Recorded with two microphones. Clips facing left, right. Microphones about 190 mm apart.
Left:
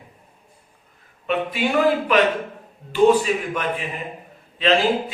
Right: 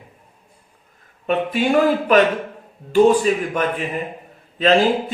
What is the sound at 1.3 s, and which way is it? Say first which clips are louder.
Speech: right 3 dB; 45° right (ahead or behind).